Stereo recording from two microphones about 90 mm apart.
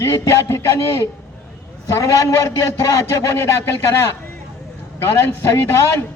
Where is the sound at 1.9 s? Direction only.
35° left (ahead or behind).